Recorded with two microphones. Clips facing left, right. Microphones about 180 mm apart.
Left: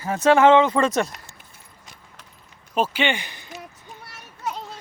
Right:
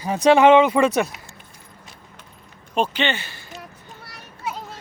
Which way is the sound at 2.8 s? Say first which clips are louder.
Even; 10° left (ahead or behind).